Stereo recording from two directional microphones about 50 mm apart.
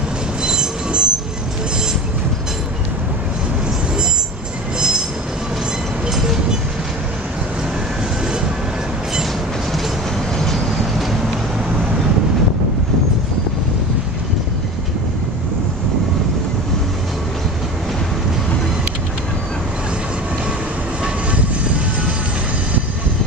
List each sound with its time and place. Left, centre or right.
0.4 s train: centre
4.7 s train: centre
6.0 s vehicle: centre
10.3 s train: centre